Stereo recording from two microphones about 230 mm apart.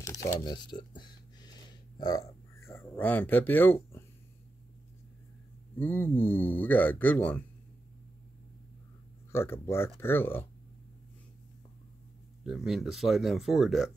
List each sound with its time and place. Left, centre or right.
0.0 s a sound: centre
5.8 s a man's voice: centre
9.3 s a man's voice: centre
12.4 s speech: centre